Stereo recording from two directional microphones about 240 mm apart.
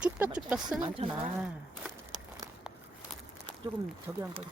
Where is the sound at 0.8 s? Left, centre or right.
Right.